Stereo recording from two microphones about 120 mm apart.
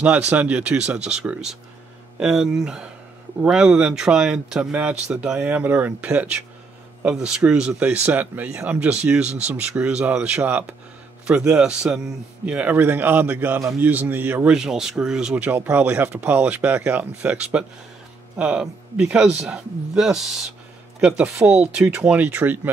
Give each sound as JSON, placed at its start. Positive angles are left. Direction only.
{"t": 0.0, "sound": "speech", "side_deg": -10}
{"t": 13.6, "sound": "a man's voice", "side_deg": -25}
{"t": 13.8, "sound": "speech", "side_deg": -15}
{"t": 14.5, "sound": "speech", "side_deg": -5}